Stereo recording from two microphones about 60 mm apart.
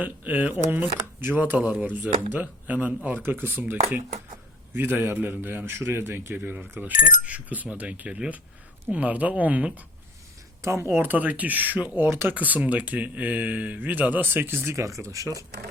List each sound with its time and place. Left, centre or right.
0.0 s a man's voice: right
10.6 s speech: right
10.8 s speech: right
14.7 s speech: right
15.0 s speech: right